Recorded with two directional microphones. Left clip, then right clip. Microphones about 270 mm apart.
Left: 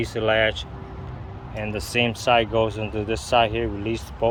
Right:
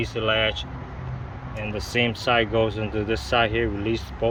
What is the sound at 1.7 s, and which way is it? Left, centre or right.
Speech, centre.